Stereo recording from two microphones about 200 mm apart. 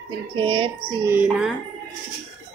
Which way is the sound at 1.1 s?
5° right (ahead or behind).